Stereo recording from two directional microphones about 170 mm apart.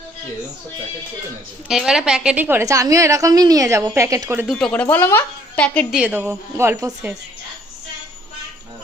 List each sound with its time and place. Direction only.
1.6 s a woman's voice: 5° right (ahead or behind)
4.4 s speech: 5° left (ahead or behind)
5.9 s a woman's voice: 5° right (ahead or behind)